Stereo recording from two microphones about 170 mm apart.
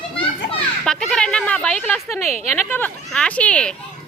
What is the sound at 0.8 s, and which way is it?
A woman's voice, 5° left (ahead or behind).